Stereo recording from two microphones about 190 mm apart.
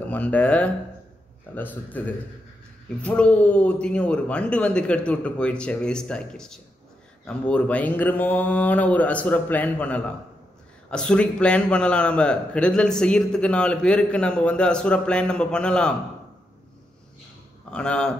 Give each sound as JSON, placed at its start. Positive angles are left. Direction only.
{"t": 0.1, "sound": "a man's voice", "side_deg": 5}
{"t": 17.6, "sound": "speech", "side_deg": 5}